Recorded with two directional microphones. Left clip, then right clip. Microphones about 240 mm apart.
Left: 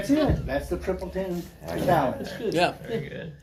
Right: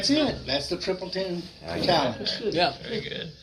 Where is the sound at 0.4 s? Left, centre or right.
Right.